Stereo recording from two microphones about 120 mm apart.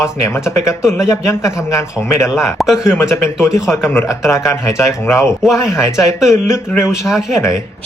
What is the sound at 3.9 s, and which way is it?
A man's voice, 25° left (ahead or behind).